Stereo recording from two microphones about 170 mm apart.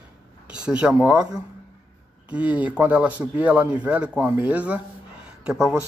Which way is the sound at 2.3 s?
10° right (ahead or behind).